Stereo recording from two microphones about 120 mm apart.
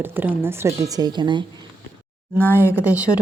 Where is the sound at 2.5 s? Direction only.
15° right (ahead or behind).